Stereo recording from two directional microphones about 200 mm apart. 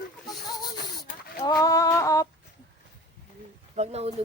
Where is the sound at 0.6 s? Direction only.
20° left (ahead or behind).